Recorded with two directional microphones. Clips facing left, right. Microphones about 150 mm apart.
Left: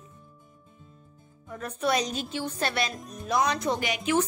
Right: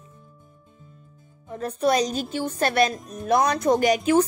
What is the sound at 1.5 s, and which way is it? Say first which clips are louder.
A woman's voice: right 5 dB; 35° right (ahead or behind).